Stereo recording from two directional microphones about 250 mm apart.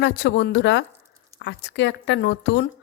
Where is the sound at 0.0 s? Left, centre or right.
Left.